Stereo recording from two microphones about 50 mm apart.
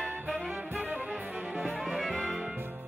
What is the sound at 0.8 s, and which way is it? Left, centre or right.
Music, right.